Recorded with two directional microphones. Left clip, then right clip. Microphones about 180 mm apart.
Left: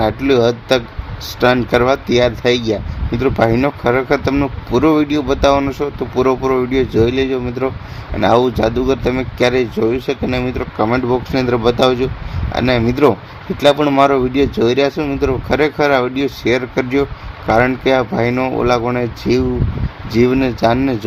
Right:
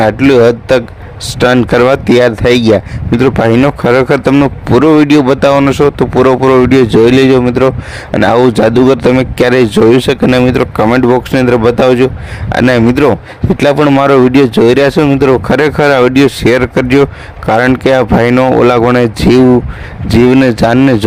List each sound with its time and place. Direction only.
0.0 s speech: 50° right (ahead or behind)